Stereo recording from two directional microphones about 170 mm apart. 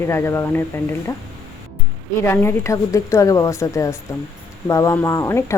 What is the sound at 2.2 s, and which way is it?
Speech, 10° left (ahead or behind).